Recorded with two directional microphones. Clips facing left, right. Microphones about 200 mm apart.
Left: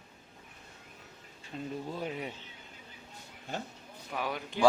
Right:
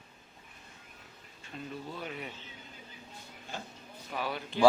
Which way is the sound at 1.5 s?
30° left (ahead or behind).